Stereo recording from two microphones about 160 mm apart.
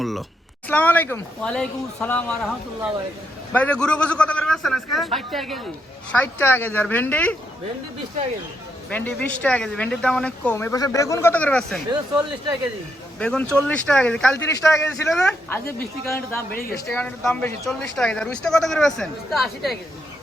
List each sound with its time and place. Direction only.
0.0 s a sound: centre (ahead or behind)
0.7 s speech: 10° left (ahead or behind)
3.5 s speech: 5° left (ahead or behind)
6.1 s speech: 10° left (ahead or behind)
8.9 s speech: 10° left (ahead or behind)
11.9 s speech: 25° right (ahead or behind)
13.1 s speech: 5° left (ahead or behind)
15.1 s speech: 10° left (ahead or behind)